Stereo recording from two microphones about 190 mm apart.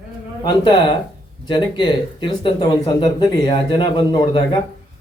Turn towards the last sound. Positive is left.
turn(degrees=25)  # may be behind; listen again after turning